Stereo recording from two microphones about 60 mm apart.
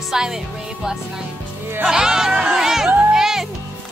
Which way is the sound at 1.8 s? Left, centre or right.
Centre.